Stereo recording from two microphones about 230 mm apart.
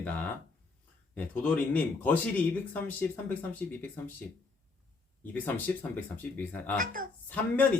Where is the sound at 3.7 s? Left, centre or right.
Centre.